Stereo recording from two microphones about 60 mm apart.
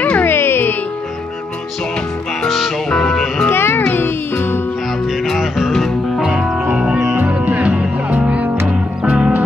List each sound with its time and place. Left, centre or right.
0.0 s music: left
2.4 s music: centre
2.9 s music: centre
3.4 s music: left
5.2 s music: centre
6.2 s music: centre